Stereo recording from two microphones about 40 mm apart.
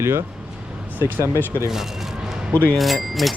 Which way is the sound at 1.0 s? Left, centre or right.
Right.